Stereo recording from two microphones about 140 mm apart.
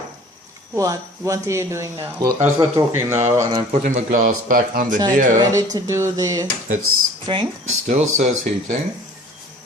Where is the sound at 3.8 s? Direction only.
70° right (ahead or behind).